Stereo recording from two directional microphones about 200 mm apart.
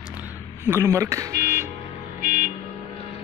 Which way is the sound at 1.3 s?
50° right (ahead or behind).